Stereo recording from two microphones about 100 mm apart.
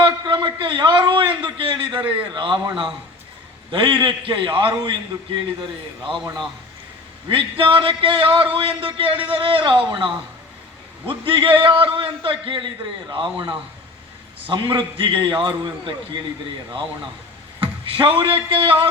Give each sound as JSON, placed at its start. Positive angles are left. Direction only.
{"t": 0.0, "sound": "a sound", "side_deg": -55}
{"t": 1.4, "sound": "a man's voice", "side_deg": -55}
{"t": 7.3, "sound": "a man's voice", "side_deg": -65}
{"t": 14.4, "sound": "a man's voice", "side_deg": -60}
{"t": 17.6, "sound": "a man's voice", "side_deg": -60}